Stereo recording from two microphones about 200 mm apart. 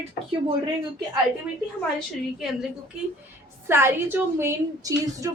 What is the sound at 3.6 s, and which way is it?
A woman's voice, 10° right (ahead or behind).